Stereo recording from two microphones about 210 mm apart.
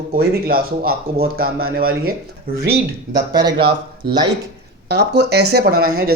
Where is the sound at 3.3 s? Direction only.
20° right (ahead or behind).